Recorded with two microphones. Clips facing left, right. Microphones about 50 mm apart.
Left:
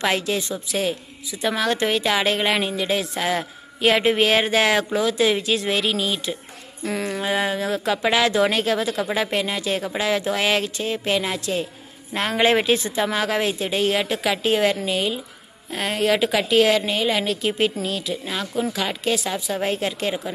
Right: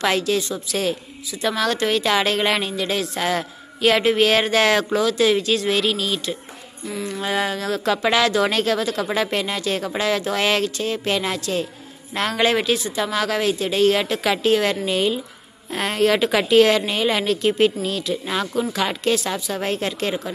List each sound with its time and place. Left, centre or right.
0.0 s a woman's voice: centre
6.8 s a sound: left
7.2 s a woman's voice: centre
18.2 s a woman's voice: centre